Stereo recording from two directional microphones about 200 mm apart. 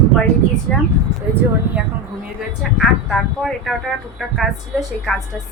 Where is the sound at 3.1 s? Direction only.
Centre (ahead or behind).